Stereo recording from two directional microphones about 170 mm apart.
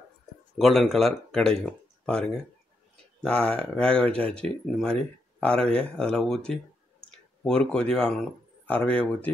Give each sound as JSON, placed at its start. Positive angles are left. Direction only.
{"t": 0.6, "sound": "speech", "side_deg": 0}